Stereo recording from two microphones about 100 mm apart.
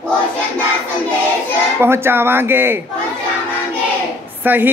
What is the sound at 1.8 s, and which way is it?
A man's voice, 25° right (ahead or behind).